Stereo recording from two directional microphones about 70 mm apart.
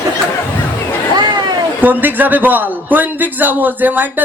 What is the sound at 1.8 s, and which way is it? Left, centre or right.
A man's voice, right.